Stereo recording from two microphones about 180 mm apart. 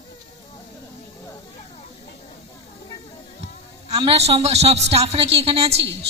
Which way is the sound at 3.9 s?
35° right (ahead or behind).